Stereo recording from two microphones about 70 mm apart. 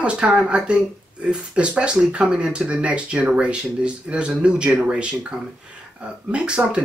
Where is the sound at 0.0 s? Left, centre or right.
Centre.